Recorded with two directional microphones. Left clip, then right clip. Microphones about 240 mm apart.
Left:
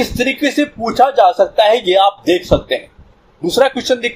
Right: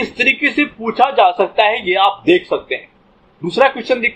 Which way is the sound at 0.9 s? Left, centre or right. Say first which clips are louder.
Left 2 dB; left.